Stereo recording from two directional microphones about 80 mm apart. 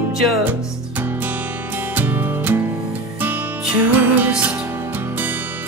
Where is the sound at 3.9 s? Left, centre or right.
Right.